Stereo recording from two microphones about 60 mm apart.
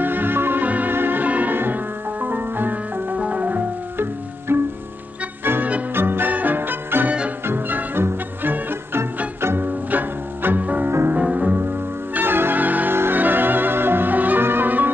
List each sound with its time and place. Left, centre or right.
0.0 s music: right
4.5 s music: right
7.1 s music: right
7.4 s music: right
9.8 s music: right
12.1 s music: right